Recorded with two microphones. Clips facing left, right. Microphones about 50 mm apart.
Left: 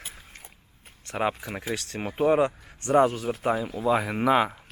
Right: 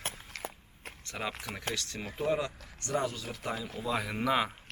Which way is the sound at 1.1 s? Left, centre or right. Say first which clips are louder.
Left 10 dB; left.